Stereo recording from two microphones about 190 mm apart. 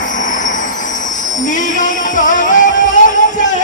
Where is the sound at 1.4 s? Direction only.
40° left (ahead or behind).